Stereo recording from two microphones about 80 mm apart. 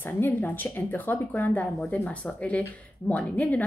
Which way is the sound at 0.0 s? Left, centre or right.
Left.